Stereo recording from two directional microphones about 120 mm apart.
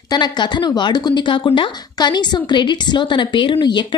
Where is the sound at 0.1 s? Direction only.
35° left (ahead or behind).